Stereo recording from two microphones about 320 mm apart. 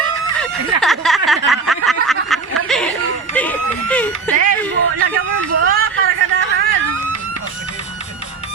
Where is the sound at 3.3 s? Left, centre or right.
Centre.